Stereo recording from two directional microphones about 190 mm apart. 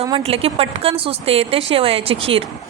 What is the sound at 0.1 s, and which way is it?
A woman's voice, 30° right (ahead or behind).